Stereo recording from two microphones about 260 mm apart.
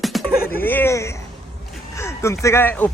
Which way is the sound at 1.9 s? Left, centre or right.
Centre.